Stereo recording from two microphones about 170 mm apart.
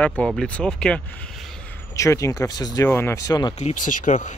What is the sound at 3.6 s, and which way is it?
Speech, 45° left (ahead or behind).